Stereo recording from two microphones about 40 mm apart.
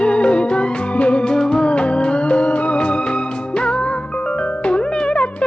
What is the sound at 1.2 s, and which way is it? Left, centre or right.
Music, centre.